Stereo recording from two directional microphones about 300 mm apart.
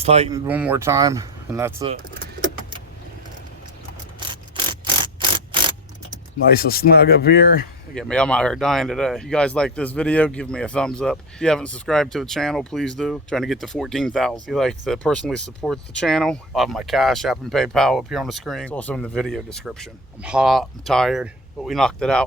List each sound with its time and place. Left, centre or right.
0.0 s speech: right
0.3 s speech: centre
1.8 s speech: right
4.5 s mechanisms: centre
6.4 s speech: left
7.9 s speech: centre